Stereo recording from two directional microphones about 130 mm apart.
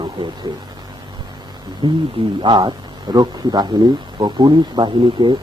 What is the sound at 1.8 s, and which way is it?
Speech, 45° right (ahead or behind).